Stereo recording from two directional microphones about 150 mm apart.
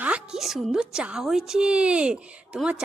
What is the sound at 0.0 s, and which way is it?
A woman's voice, 5° right (ahead or behind).